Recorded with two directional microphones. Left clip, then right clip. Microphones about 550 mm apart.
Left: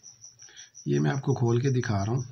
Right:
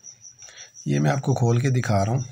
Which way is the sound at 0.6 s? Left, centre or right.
Left.